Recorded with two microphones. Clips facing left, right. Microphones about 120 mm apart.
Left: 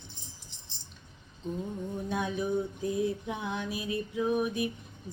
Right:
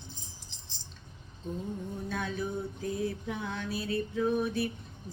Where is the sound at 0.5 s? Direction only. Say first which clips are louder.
Right 1 dB; 90° right.